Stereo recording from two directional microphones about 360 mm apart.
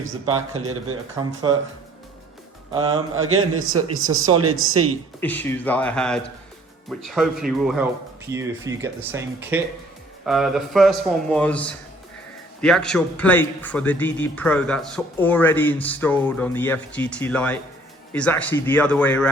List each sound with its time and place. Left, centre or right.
0.3 s a man's voice: right
1.2 s speech: centre
2.9 s a man's voice: right
5.2 s a man's voice: centre